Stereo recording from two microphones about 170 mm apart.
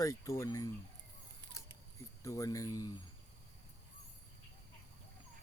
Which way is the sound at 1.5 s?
20° right (ahead or behind).